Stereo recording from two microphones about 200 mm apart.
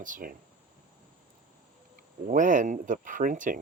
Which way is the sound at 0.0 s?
40° right (ahead or behind).